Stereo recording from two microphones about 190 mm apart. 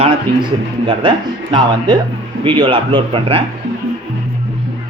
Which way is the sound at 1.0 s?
25° right (ahead or behind).